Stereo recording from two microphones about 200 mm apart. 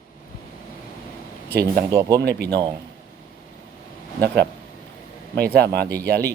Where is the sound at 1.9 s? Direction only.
20° right (ahead or behind).